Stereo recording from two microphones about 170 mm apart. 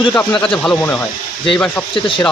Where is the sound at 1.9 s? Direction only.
30° left (ahead or behind).